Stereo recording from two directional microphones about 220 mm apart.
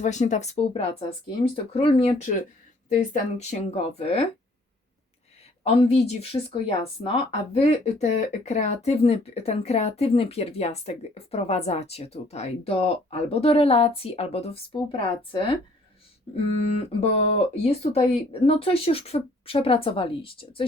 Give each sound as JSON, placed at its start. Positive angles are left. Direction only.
{"t": 0.0, "sound": "speech", "side_deg": 35}
{"t": 5.6, "sound": "speech", "side_deg": 25}